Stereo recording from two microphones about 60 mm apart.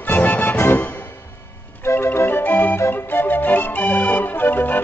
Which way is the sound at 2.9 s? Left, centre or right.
Left.